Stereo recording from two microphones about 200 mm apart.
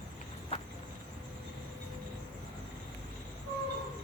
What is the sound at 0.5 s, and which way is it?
Cricket, 30° left (ahead or behind).